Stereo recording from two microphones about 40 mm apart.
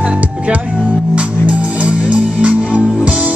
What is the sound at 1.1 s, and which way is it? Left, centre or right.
Music, right.